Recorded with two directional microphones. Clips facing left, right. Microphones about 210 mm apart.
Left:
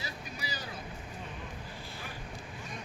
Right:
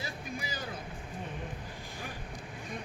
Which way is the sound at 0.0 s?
50° right (ahead or behind).